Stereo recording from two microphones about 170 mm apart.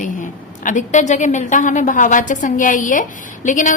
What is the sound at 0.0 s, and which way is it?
A woman's voice, 50° left (ahead or behind).